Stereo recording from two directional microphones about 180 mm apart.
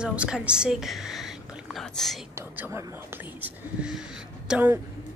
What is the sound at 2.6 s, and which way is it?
Speech, 15° right (ahead or behind).